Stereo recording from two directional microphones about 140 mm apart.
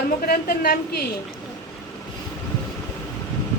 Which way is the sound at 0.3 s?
90° left.